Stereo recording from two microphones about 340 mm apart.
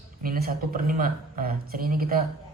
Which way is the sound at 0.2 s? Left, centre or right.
Right.